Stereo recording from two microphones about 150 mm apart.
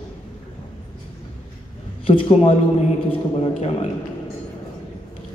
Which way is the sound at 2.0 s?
35° left (ahead or behind).